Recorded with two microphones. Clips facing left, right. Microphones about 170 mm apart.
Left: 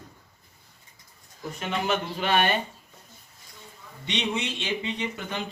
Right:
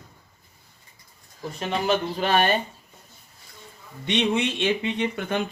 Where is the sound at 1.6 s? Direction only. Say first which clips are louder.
Right 4 dB; 35° right (ahead or behind).